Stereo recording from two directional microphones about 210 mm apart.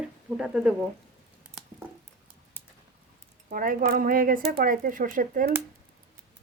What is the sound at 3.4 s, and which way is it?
Speech, 40° right (ahead or behind).